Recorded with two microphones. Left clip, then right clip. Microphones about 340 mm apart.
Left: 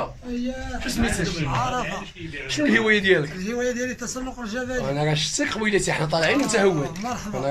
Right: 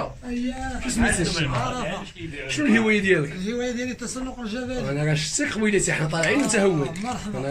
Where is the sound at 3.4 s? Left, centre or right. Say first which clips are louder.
Left 2 dB; centre.